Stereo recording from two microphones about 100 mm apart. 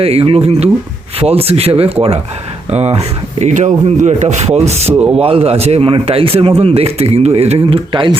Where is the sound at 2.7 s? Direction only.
90° right.